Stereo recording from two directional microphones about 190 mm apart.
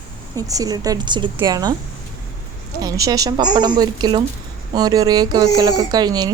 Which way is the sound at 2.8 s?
20° right (ahead or behind).